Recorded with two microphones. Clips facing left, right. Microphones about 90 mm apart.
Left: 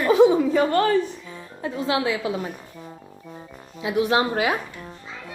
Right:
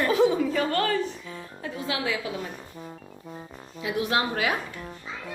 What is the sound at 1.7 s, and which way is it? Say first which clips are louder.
Speech: left 6 dB; 25° left (ahead or behind).